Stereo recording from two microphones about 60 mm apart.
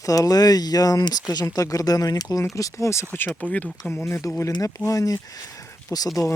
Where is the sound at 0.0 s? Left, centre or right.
Left.